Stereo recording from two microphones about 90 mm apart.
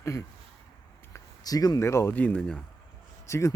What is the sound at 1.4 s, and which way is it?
Speech, 45° left (ahead or behind).